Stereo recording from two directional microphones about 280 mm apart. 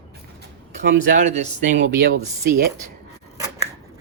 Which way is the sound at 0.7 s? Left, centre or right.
Right.